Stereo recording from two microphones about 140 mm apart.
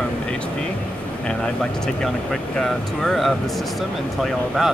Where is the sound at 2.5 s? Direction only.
Centre (ahead or behind).